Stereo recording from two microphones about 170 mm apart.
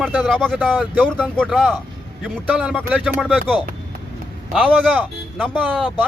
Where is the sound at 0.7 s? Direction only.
10° right (ahead or behind).